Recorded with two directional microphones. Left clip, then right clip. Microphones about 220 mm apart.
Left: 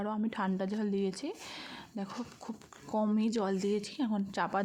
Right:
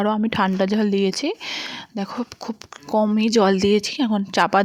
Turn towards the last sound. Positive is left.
turn(degrees=-35)  # may be behind; listen again after turning